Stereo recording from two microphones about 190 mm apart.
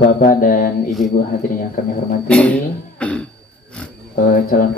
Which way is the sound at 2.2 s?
5° left (ahead or behind).